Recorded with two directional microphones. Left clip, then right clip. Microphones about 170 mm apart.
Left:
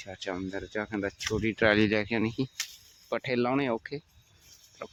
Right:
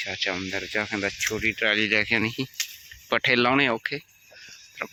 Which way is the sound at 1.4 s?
30° left (ahead or behind).